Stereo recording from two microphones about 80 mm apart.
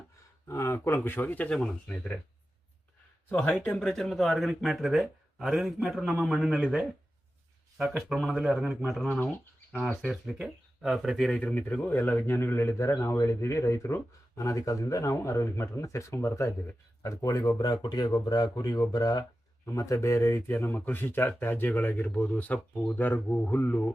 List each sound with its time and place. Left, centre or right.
0.4 s a man's voice: left
1.5 s speech: centre
3.3 s a man's voice: centre
10.1 s speech: centre
11.3 s speech: centre
11.7 s a man's voice: left
17.6 s speech: left
19.6 s a man's voice: left
20.5 s speech: left